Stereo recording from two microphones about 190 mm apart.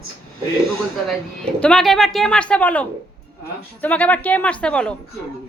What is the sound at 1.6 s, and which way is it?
A woman's voice, 5° left (ahead or behind).